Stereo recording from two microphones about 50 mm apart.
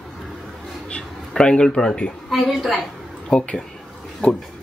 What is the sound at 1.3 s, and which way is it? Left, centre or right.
Speech, centre.